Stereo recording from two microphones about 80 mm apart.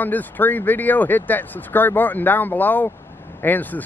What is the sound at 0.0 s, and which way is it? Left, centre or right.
Speech, left.